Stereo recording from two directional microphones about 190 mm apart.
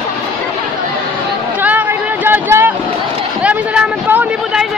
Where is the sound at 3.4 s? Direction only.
10° right (ahead or behind).